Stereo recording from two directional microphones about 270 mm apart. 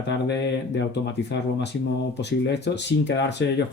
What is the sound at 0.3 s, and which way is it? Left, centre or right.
Speech, left.